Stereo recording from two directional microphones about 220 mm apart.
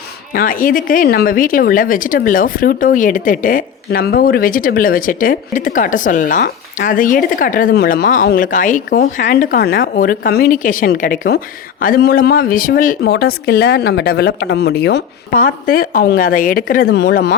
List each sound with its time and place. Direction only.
0.3 s speech: 40° left (ahead or behind)